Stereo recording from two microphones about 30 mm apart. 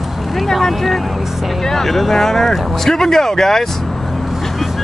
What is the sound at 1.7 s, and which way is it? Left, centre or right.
Speech, centre.